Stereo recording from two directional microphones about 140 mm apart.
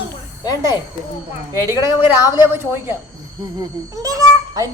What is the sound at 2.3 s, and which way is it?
Speech, 15° right (ahead or behind).